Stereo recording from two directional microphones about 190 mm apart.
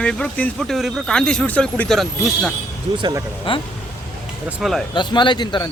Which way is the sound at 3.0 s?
20° right (ahead or behind).